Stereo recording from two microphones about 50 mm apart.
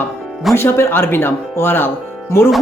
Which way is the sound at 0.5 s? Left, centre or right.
Left.